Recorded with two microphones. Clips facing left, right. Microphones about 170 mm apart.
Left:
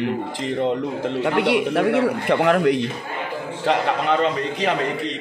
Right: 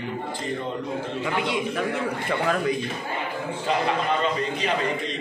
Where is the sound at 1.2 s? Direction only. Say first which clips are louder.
Left 8 dB; 70° left (ahead or behind).